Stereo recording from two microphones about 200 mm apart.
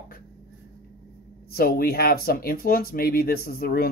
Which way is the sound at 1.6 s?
50° left (ahead or behind).